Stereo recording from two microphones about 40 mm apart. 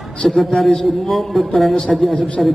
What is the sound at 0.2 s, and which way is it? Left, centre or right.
A woman's voice, centre.